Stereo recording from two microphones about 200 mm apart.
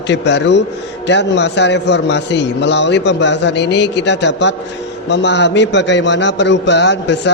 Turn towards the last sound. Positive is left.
turn(degrees=60)  # may be behind; listen again after turning